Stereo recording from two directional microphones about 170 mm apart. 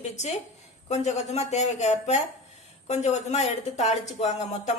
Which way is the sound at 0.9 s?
40° left (ahead or behind).